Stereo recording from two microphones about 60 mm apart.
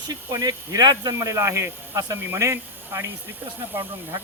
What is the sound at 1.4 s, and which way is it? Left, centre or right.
Speech, right.